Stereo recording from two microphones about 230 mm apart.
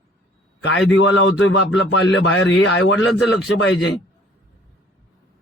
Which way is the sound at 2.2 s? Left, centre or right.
Left.